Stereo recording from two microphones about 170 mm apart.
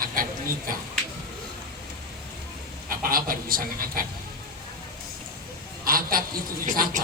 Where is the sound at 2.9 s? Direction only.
60° right (ahead or behind).